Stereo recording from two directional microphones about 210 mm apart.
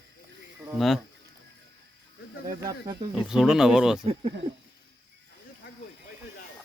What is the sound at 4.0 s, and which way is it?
Speech, 30° right (ahead or behind).